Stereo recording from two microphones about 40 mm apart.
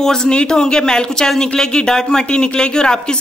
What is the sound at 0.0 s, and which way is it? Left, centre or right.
A man's voice, centre.